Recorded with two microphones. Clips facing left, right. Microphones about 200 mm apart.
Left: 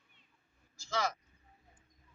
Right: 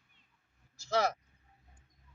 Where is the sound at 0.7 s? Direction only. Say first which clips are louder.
Right 5 dB; 65° right (ahead or behind).